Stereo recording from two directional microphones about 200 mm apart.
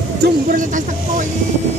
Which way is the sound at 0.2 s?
40° right (ahead or behind).